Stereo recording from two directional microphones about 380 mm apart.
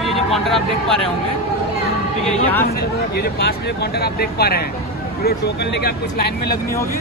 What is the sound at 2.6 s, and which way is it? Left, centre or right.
Speech, left.